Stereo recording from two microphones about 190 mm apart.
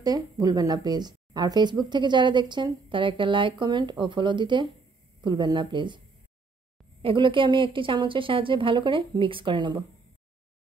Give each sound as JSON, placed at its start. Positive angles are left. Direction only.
{"t": 0.0, "sound": "a woman's voice", "side_deg": -20}
{"t": 7.0, "sound": "a woman's voice", "side_deg": -25}